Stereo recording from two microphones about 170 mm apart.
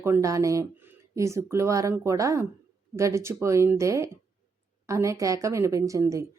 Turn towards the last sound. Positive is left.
turn(degrees=-20)  # may be behind; listen again after turning